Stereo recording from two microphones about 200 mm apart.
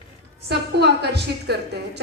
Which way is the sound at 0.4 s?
55° right (ahead or behind).